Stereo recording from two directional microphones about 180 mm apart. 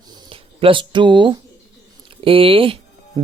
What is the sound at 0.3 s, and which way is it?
Speech, 30° right (ahead or behind).